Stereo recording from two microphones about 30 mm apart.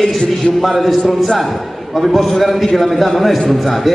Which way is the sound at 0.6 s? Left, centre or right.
Centre.